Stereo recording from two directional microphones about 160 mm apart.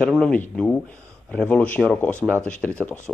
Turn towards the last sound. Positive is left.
turn(degrees=10)  # may be behind; listen again after turning